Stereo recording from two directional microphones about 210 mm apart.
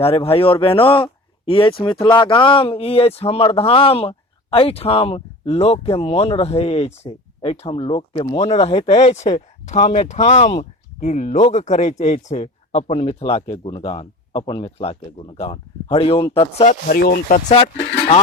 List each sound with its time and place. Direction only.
0.0 s speech: 25° left (ahead or behind)
16.9 s speech: 45° left (ahead or behind)
17.5 s speech: 25° left (ahead or behind)